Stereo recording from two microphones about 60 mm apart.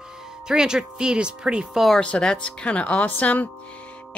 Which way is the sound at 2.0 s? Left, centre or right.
Centre.